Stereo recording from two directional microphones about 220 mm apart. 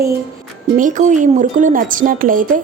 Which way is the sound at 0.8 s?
35° right (ahead or behind).